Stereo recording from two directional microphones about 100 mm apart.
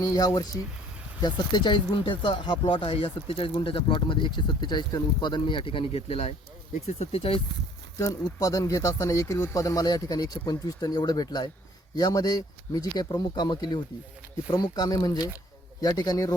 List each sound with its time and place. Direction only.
0.0 s speech: 35° left (ahead or behind); by 7.4 s 65° left (ahead or behind)
7.9 s speech: 35° left (ahead or behind)